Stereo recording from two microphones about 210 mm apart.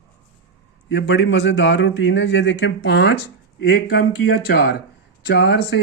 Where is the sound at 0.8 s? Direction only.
60° left (ahead or behind).